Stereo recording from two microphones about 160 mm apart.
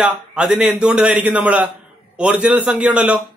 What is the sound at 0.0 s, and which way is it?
A man's voice, 5° right (ahead or behind).